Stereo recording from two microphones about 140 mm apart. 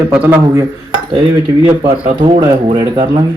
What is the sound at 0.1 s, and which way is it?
Speech, 15° right (ahead or behind).